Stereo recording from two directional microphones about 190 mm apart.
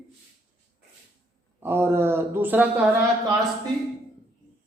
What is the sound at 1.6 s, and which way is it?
A woman's voice, 10° right (ahead or behind).